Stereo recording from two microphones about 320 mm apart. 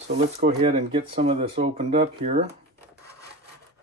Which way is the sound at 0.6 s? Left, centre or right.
Centre.